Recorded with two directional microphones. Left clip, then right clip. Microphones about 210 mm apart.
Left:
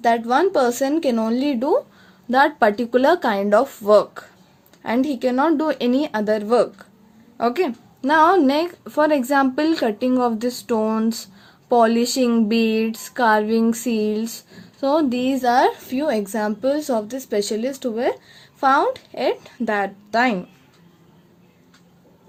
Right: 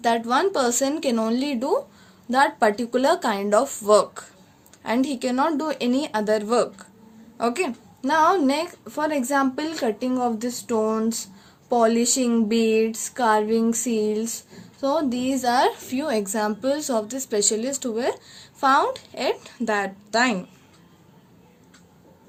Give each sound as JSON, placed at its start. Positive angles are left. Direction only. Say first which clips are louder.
{"t": 0.0, "sound": "a woman's voice", "louder": "left 3 dB", "side_deg": 35}